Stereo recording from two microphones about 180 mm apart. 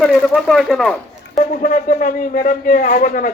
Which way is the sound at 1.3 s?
45° left (ahead or behind).